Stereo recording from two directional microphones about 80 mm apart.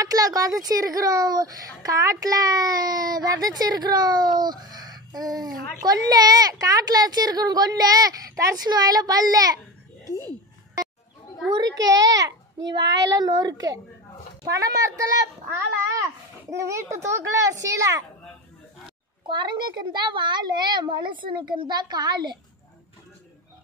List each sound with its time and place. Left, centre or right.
0.0 s speech: right
8.6 s a child's voice: right
10.0 s speech: left
11.5 s speech: right
14.5 s speech: right
16.4 s a child's voice: right
19.2 s a child's voice: right